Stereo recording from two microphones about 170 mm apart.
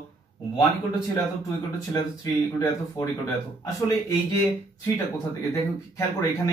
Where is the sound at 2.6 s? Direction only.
10° left (ahead or behind).